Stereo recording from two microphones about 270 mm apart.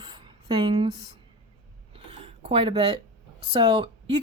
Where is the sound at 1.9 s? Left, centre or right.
Right.